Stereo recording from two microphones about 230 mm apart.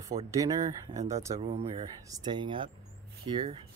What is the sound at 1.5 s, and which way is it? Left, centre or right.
A man's voice, right.